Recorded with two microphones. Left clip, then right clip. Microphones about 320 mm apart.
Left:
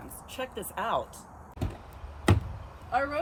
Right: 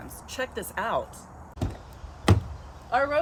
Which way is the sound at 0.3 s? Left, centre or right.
Centre.